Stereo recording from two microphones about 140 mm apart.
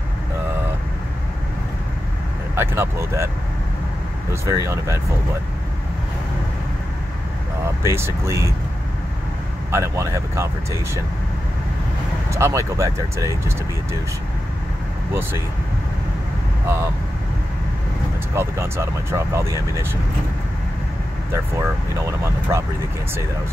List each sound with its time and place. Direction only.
2.5 s speech: 15° right (ahead or behind)
4.3 s speech: 20° right (ahead or behind)
7.8 s speech: 20° right (ahead or behind)
9.7 s speech: 20° right (ahead or behind)
12.3 s speech: 20° right (ahead or behind)
18.3 s speech: 20° right (ahead or behind)
21.3 s speech: 20° right (ahead or behind)